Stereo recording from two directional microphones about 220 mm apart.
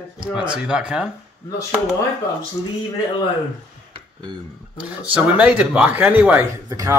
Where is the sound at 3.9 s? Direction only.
20° right (ahead or behind).